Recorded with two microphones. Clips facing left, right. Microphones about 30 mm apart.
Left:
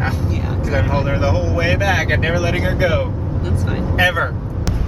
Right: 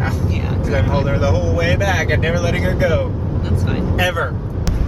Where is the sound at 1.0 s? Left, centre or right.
Left.